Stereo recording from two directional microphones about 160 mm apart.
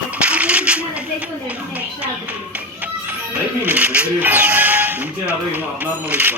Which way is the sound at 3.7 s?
10° right (ahead or behind).